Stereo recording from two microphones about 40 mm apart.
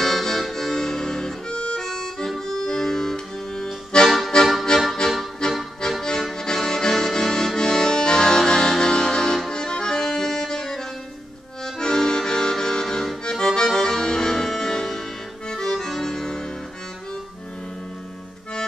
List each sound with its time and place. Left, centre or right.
0.0 s accordion: centre
1.8 s music: centre
3.9 s accordion: left
4.3 s music: left
6.3 s accordion: centre